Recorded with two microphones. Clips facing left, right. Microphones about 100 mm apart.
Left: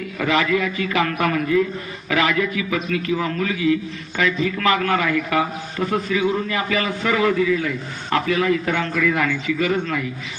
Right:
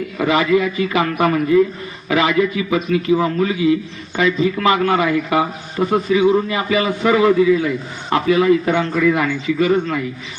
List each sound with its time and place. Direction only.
0.2 s a man's voice: 10° right (ahead or behind)
9.6 s a man's voice: 5° right (ahead or behind)